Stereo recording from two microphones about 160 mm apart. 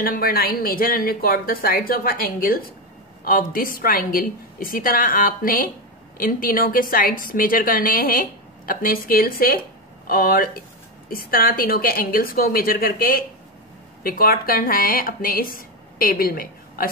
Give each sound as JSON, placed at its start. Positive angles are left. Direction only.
{"t": 0.0, "sound": "a woman's voice", "side_deg": 65}